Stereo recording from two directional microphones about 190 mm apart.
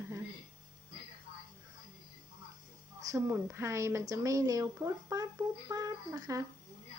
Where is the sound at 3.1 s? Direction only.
15° right (ahead or behind).